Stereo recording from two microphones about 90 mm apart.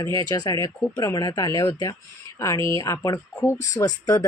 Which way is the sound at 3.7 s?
40° left (ahead or behind).